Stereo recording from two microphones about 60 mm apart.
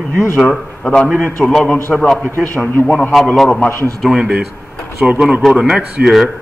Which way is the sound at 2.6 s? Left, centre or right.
Left.